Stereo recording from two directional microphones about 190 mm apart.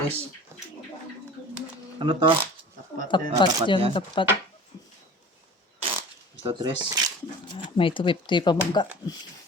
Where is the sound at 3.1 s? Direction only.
25° left (ahead or behind).